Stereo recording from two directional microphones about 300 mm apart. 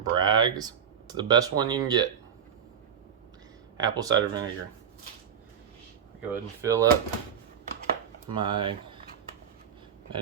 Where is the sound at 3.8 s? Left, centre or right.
Centre.